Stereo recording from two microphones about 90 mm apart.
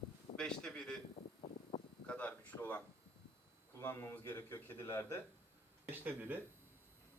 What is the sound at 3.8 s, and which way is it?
A man's voice, 30° left (ahead or behind).